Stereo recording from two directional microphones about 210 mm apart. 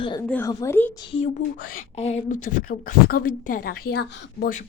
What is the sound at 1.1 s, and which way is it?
A woman's voice, 30° left (ahead or behind).